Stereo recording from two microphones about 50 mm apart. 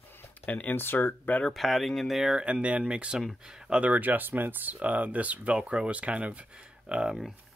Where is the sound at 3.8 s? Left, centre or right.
Right.